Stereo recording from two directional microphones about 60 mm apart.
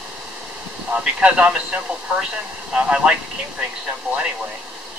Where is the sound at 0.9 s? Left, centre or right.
Centre.